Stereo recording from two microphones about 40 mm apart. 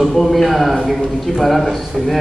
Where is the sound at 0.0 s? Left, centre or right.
Centre.